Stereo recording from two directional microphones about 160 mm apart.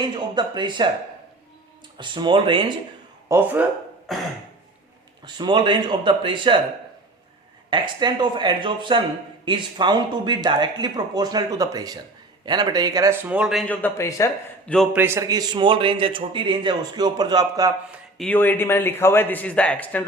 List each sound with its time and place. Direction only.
0.0 s a man's voice: 30° right (ahead or behind)
2.0 s a man's voice: 30° right (ahead or behind)
3.2 s speech: 15° right (ahead or behind)
4.1 s throat clearing: centre (ahead or behind)
5.2 s a man's voice: 30° right (ahead or behind)
7.7 s a man's voice: 30° right (ahead or behind); by 13.7 s 5° right (ahead or behind)
13.7 s speech: 15° left (ahead or behind)
14.9 s a man's voice: 15° right (ahead or behind)
18.3 s speech: 10° left (ahead or behind)